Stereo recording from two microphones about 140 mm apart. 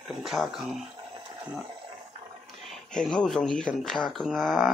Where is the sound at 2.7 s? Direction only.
5° left (ahead or behind).